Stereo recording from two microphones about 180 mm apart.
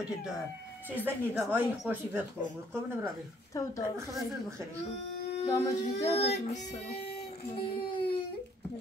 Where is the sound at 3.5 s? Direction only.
20° left (ahead or behind).